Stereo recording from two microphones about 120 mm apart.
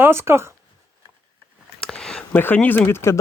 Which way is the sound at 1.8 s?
5° left (ahead or behind).